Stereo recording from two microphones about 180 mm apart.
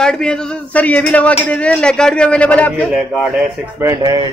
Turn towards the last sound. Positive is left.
turn(degrees=-20)  # may be behind; listen again after turning